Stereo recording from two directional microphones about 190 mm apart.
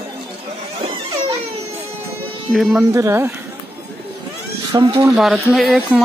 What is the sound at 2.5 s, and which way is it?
Speech, centre (ahead or behind).